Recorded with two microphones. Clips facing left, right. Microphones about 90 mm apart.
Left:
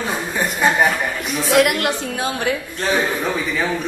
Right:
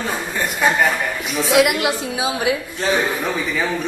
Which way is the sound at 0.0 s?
15° left (ahead or behind).